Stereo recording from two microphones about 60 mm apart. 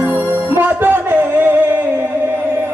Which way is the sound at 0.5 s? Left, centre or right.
Right.